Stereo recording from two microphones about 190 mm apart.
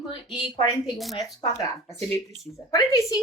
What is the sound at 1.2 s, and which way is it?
Speech, 20° left (ahead or behind).